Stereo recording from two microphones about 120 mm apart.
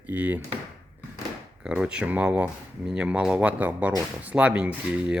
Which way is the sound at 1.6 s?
10° right (ahead or behind).